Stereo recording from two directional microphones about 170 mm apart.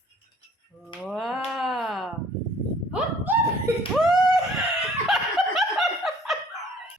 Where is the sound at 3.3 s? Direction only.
10° right (ahead or behind).